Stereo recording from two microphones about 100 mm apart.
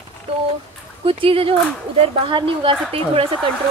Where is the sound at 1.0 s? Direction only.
65° right (ahead or behind).